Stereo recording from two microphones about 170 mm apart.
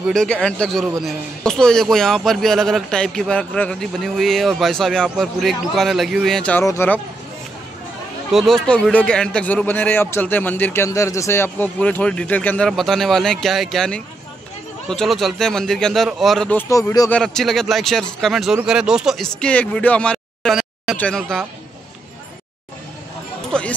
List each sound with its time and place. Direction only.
0.0 s a man's voice: 5° left (ahead or behind)
6.6 s a man's voice: 15° left (ahead or behind)
8.3 s a man's voice: centre (ahead or behind); by 17.1 s 20° left (ahead or behind)
17.1 s a man's voice: 5° left (ahead or behind)
23.5 s a man's voice: 5° left (ahead or behind)